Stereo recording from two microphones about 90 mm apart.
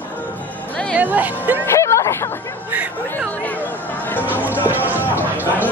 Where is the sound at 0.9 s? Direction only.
20° right (ahead or behind).